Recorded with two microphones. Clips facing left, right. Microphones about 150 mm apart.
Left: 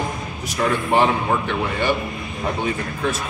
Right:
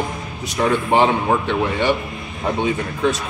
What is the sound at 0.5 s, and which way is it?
Speech, 20° right (ahead or behind).